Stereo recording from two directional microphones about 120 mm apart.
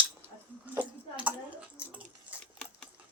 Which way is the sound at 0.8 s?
10° right (ahead or behind).